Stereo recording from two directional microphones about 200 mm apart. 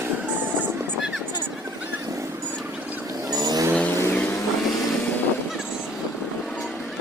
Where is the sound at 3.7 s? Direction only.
10° left (ahead or behind).